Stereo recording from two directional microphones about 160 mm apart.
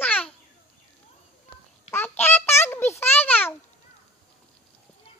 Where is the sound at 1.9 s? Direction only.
15° left (ahead or behind).